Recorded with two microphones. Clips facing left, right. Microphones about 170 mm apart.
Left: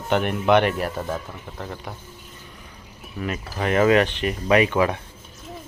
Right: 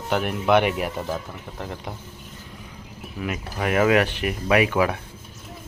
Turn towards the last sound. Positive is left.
turn(degrees=-10)  # may be behind; listen again after turning